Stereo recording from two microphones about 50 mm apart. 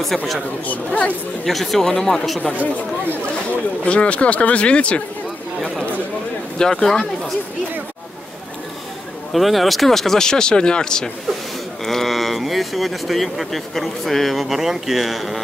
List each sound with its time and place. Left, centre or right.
0.7 s speech: left
1.4 s speech: centre
3.8 s speech: left
6.6 s speech: centre
9.3 s speech: centre